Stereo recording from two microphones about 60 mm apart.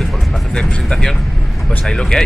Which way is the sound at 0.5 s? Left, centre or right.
Centre.